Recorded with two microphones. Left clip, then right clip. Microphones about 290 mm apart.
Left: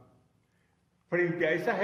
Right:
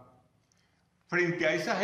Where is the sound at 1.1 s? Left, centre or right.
Left.